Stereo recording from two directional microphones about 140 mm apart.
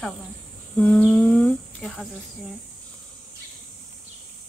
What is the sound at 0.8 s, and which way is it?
Humming, 10° left (ahead or behind).